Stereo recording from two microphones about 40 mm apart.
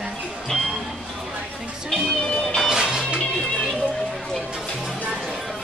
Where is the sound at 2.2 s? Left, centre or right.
Left.